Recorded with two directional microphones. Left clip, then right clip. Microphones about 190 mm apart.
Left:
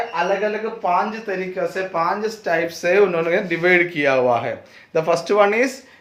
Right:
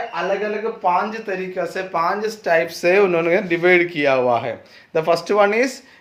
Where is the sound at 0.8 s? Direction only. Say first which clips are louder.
Even; 40° right (ahead or behind); by 5.8 s 15° right (ahead or behind).